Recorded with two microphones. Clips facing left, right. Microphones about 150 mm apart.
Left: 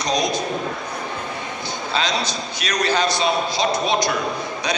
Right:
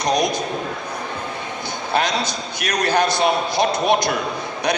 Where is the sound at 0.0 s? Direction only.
55° right (ahead or behind).